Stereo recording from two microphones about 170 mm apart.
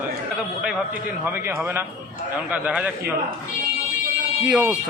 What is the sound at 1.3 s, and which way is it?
A man's voice, 10° right (ahead or behind).